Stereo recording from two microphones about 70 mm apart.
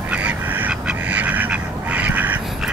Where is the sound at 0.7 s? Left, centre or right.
Centre.